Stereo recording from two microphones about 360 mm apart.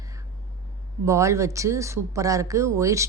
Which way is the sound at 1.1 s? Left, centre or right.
Centre.